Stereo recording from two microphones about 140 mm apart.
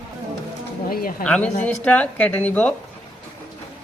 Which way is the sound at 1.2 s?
10° left (ahead or behind).